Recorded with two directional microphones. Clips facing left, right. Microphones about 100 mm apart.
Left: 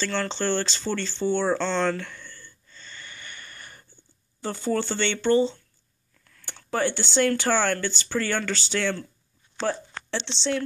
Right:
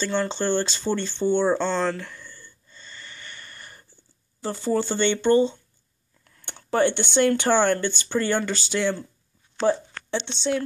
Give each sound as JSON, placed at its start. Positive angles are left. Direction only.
{"t": 0.0, "sound": "speech", "side_deg": -15}
{"t": 1.7, "sound": "speech", "side_deg": -5}
{"t": 2.9, "sound": "a sound", "side_deg": 5}
{"t": 4.4, "sound": "speech", "side_deg": -10}
{"t": 6.2, "sound": "speech", "side_deg": -25}
{"t": 9.6, "sound": "speech", "side_deg": 0}